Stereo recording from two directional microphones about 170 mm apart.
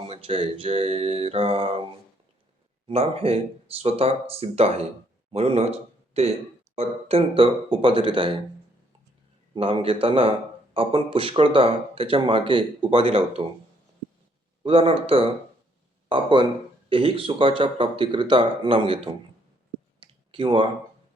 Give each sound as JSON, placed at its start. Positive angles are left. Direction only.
{"t": 0.1, "sound": "speech", "side_deg": -35}
{"t": 9.6, "sound": "speech", "side_deg": -30}
{"t": 14.6, "sound": "speech", "side_deg": -35}
{"t": 20.0, "sound": "clicking", "side_deg": -30}